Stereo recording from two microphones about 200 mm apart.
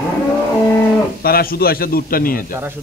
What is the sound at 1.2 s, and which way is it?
A man's voice, 50° left (ahead or behind).